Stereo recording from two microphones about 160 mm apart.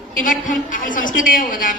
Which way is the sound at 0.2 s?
55° left (ahead or behind).